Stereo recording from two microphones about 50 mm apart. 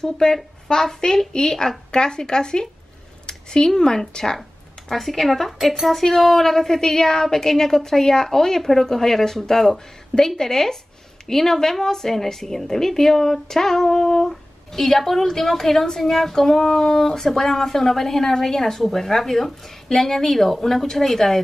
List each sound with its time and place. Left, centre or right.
0.0 s a woman's voice: centre